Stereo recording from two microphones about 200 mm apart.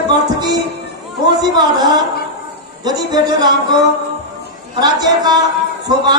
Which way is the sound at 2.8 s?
20° right (ahead or behind).